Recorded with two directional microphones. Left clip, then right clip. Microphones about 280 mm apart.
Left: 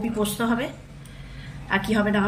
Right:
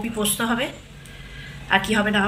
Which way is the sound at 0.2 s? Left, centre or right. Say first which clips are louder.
Right 2 dB; centre.